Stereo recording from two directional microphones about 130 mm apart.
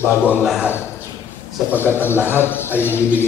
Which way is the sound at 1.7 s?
15° left (ahead or behind).